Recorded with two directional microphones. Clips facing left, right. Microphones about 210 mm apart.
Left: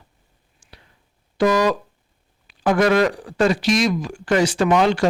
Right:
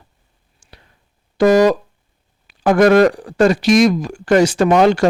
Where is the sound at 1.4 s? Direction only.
45° right (ahead or behind).